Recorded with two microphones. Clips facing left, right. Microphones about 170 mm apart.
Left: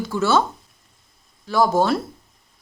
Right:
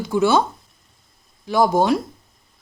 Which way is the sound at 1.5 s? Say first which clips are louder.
Right 1 dB; 15° right (ahead or behind).